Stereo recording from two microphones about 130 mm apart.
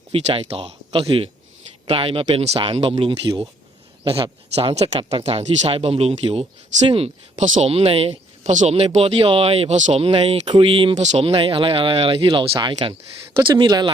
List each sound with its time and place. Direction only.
0.1 s speech: 45° right (ahead or behind)
7.4 s speech: 75° right (ahead or behind)
7.7 s speech: 50° right (ahead or behind)
8.4 s speech: 60° right (ahead or behind)
10.0 s speech: 50° right (ahead or behind)
10.5 s speech: 45° right (ahead or behind)
10.9 s speech: 60° right (ahead or behind); by 13.9 s 35° right (ahead or behind)